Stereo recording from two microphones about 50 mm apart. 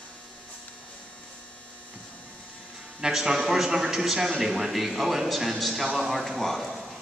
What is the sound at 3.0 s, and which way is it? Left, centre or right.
A man's voice, centre.